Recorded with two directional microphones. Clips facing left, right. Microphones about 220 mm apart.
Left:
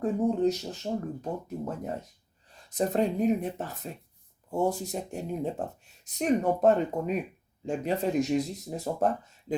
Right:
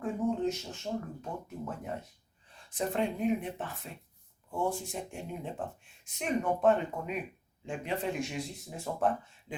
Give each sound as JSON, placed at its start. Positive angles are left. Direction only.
{"t": 0.0, "sound": "speech", "side_deg": 35}